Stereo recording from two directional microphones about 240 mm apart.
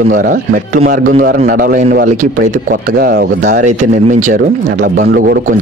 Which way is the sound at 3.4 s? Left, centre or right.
Right.